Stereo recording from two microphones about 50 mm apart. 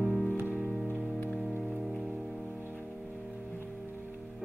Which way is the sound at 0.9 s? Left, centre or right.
Left.